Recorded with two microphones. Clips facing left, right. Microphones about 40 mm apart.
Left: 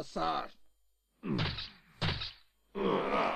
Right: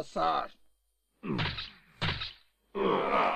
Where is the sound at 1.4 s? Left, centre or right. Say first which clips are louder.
Right 2 dB; right.